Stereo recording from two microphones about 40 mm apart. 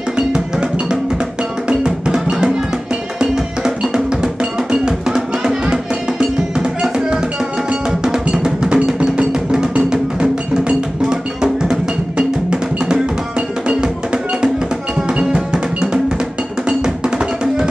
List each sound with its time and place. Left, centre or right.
0.3 s music: centre
1.7 s percussion: centre
3.2 s music: centre
8.3 s percussion: right
9.8 s music: right
11.7 s percussion: right
13.7 s music: right
16.6 s percussion: centre